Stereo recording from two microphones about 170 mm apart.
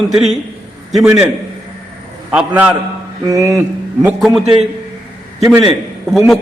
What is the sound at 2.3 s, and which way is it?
Speech, 5° right (ahead or behind).